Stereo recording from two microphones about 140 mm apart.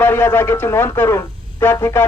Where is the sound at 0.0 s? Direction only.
15° left (ahead or behind).